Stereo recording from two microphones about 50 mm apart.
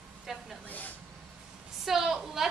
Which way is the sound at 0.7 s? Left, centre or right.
Left.